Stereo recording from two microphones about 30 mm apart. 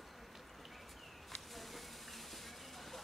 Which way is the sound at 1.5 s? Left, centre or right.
Centre.